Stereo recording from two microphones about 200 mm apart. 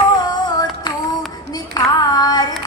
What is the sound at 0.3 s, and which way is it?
Music, 20° left (ahead or behind).